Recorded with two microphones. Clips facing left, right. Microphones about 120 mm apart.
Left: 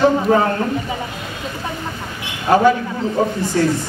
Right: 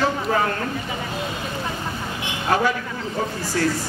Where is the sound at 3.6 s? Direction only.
30° left (ahead or behind).